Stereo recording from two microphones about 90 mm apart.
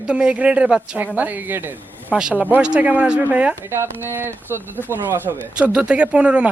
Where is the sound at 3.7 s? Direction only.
25° right (ahead or behind).